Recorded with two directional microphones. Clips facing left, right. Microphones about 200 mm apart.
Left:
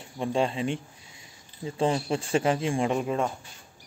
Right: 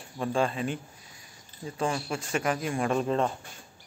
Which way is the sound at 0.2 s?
25° left (ahead or behind).